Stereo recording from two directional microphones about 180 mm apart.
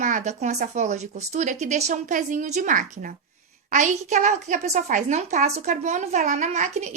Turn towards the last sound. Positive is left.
turn(degrees=-40)  # may be behind; listen again after turning